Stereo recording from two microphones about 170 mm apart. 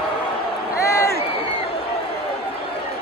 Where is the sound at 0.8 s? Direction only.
15° left (ahead or behind).